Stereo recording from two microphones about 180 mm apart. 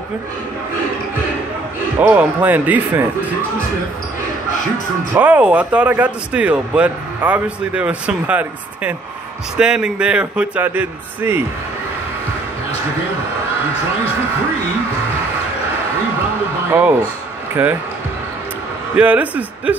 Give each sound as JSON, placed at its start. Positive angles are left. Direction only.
{"t": 2.0, "sound": "speech", "side_deg": -10}
{"t": 5.1, "sound": "a man's voice", "side_deg": -10}
{"t": 17.6, "sound": "speech", "side_deg": -10}
{"t": 18.9, "sound": "speech", "side_deg": -10}